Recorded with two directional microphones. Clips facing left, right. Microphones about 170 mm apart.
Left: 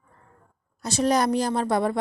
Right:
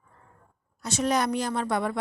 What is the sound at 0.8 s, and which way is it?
Speech, 35° left (ahead or behind).